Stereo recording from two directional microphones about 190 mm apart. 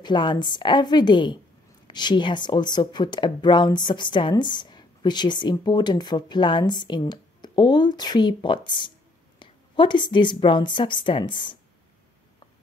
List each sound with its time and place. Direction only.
0.0 s speech: 25° left (ahead or behind)